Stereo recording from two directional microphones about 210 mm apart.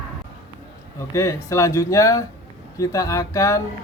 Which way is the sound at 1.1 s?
15° left (ahead or behind).